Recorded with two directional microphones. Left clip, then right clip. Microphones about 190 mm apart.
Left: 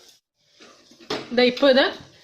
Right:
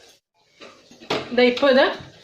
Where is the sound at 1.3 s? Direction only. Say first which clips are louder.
Right 1 dB; 60° left (ahead or behind).